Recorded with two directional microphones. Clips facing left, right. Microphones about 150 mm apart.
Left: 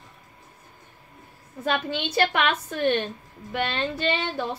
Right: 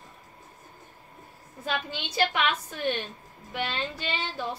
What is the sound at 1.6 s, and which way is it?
A woman's voice, 60° left (ahead or behind).